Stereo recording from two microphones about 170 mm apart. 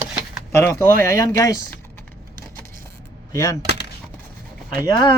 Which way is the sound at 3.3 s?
20° left (ahead or behind).